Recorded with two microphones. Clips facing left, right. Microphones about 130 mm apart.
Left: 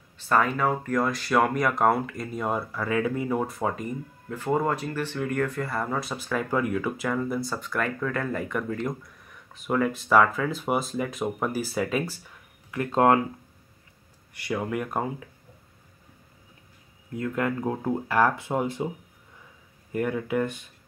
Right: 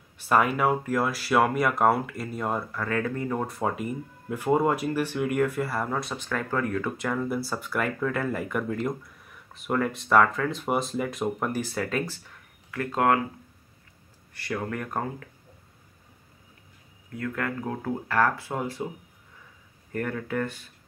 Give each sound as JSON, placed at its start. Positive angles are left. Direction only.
{"t": 0.2, "sound": "speech", "side_deg": -10}
{"t": 12.7, "sound": "speech", "side_deg": 25}
{"t": 14.3, "sound": "speech", "side_deg": 15}
{"t": 17.1, "sound": "speech", "side_deg": 20}
{"t": 19.9, "sound": "speech", "side_deg": 10}